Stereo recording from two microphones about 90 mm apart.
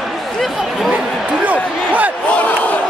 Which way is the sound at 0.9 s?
15° right (ahead or behind).